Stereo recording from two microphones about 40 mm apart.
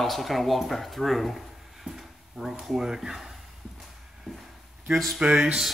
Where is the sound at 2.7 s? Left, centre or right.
Centre.